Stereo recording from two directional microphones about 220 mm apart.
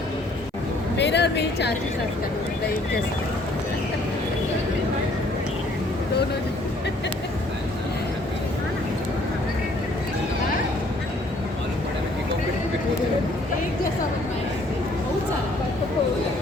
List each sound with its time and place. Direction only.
0.9 s a woman's voice: 50° left (ahead or behind)